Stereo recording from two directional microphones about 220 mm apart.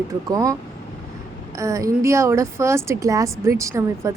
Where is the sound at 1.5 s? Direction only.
15° right (ahead or behind).